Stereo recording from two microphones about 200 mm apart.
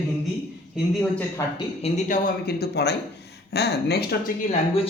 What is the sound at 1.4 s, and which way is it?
Speech, 15° left (ahead or behind).